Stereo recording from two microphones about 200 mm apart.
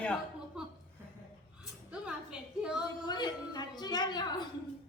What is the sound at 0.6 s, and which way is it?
Chuckle, 5° right (ahead or behind).